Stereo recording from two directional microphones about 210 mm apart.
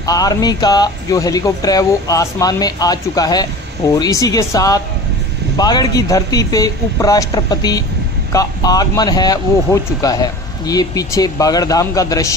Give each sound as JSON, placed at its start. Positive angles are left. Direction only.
{"t": 0.0, "sound": "a man's voice", "side_deg": 15}